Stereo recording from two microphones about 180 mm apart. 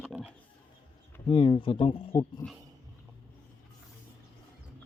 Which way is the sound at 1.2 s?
25° left (ahead or behind).